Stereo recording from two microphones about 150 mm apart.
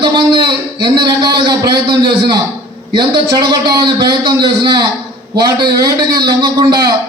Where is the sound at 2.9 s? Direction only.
25° right (ahead or behind).